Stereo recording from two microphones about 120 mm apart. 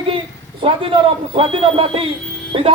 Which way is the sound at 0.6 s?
45° right (ahead or behind).